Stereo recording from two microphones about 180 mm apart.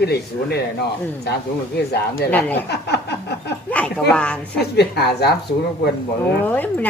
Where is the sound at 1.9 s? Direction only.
65° left (ahead or behind).